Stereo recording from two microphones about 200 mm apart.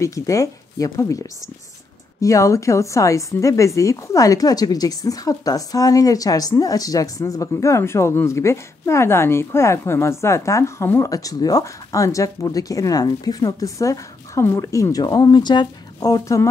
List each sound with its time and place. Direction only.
0.0 s a woman's voice: 15° left (ahead or behind)
2.2 s a woman's voice: 15° left (ahead or behind)